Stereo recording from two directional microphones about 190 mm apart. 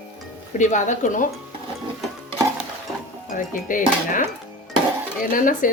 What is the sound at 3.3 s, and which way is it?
Speech, 45° left (ahead or behind).